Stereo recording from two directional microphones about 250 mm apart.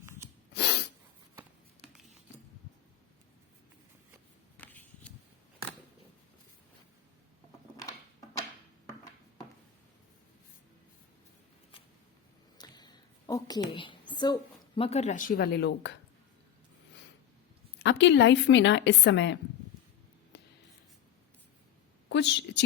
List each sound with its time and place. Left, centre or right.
0.5 s sneeze: left
4.5 s a sound: centre
12.5 s a sound: centre
14.8 s speech: left
17.8 s a woman's voice: left
20.3 s writing: left
22.1 s a woman's voice: left